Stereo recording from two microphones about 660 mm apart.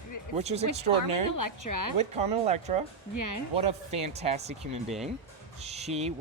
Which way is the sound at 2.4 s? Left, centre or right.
Centre.